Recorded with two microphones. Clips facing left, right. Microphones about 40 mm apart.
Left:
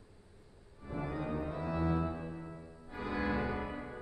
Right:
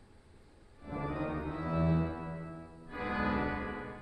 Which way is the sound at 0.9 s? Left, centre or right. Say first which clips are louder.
Right 1 dB; centre.